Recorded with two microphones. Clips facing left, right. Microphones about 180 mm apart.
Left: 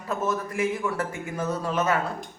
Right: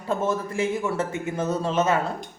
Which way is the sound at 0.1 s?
30° right (ahead or behind).